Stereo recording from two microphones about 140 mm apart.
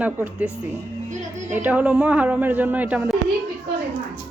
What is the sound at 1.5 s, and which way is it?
Speech, 10° right (ahead or behind).